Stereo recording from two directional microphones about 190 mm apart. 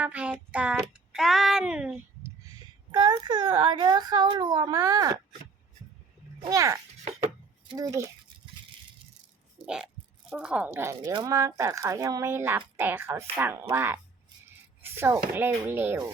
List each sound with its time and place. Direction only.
0.0 s child singing: 5° right (ahead or behind)
2.9 s a sound: 20° right (ahead or behind)
6.5 s speech: 15° right (ahead or behind)
7.8 s speech: 20° right (ahead or behind)
10.2 s speech: 5° right (ahead or behind)